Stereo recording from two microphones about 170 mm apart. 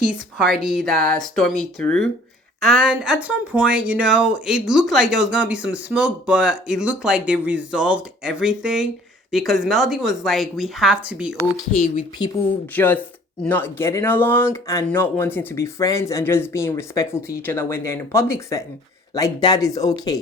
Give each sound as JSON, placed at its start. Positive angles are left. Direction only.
{"t": 0.1, "sound": "speech", "side_deg": 0}
{"t": 12.7, "sound": "speech", "side_deg": 10}